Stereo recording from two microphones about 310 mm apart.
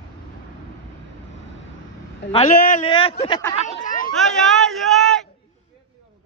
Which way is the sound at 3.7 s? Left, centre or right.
Left.